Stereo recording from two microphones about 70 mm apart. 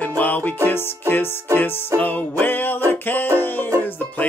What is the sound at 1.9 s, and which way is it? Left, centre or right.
Music, left.